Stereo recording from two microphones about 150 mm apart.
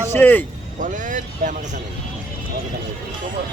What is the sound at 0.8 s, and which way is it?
Speech, 60° right (ahead or behind).